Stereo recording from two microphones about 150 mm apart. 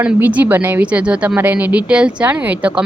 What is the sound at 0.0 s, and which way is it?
A woman's voice, 10° right (ahead or behind).